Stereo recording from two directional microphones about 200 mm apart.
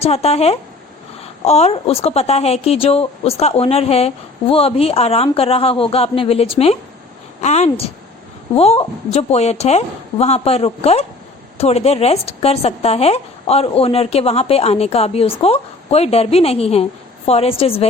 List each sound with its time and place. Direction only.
0.0 s a woman's voice: 30° left (ahead or behind)